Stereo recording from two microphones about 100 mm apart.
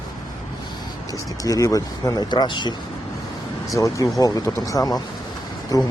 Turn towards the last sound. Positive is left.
turn(degrees=35)  # may be behind; listen again after turning